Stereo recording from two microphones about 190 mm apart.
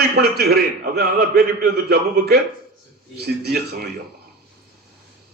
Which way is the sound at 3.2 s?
55° right (ahead or behind).